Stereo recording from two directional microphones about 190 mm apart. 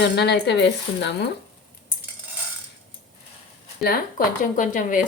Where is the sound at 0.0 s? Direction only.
60° left (ahead or behind).